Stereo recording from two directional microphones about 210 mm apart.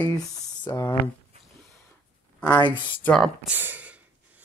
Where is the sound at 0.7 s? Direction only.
15° left (ahead or behind).